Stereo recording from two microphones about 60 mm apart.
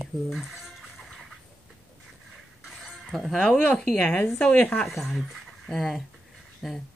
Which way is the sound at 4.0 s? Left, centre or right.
Left.